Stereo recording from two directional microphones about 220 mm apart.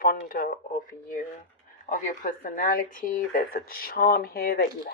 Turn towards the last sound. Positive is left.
turn(degrees=45)  # may be behind; listen again after turning